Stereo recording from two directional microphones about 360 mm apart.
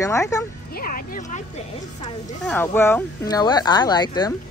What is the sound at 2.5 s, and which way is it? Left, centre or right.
Speech, centre.